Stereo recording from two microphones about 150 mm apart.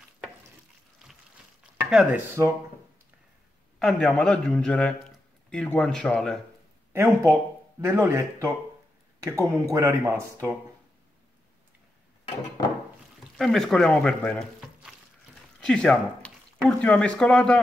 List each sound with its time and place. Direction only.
1.9 s a man's voice: 5° right (ahead or behind)
3.8 s a man's voice: 5° left (ahead or behind)
6.9 s speech: 15° right (ahead or behind)
13.4 s a man's voice: centre (ahead or behind)
15.6 s speech: 5° left (ahead or behind)